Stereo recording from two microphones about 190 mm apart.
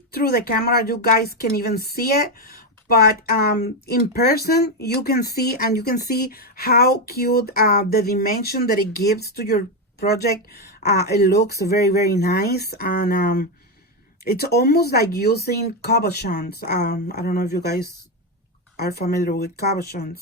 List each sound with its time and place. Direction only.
0.1 s speech: 55° left (ahead or behind)
18.8 s speech: 55° left (ahead or behind)